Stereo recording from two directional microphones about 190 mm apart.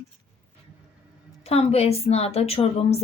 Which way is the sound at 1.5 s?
30° left (ahead or behind).